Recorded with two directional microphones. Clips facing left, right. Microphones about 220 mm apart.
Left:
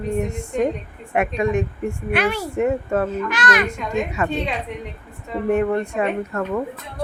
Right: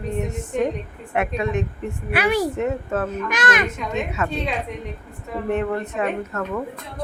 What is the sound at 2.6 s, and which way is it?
Speech, 10° left (ahead or behind).